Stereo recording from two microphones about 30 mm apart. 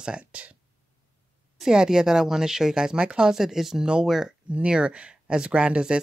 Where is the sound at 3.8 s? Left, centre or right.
Right.